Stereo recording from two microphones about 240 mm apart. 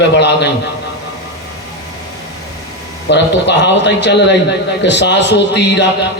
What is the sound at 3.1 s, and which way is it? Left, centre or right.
A man's voice, left.